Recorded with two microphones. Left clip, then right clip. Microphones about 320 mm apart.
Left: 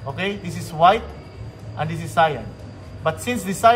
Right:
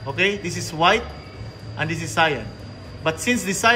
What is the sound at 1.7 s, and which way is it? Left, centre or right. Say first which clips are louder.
A man's voice: left 2 dB; centre.